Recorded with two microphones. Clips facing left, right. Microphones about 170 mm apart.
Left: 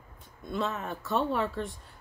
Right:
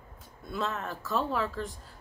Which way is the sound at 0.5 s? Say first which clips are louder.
Left 1 dB; centre (ahead or behind).